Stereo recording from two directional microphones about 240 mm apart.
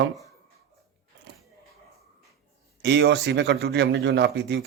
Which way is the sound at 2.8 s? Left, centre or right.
Right.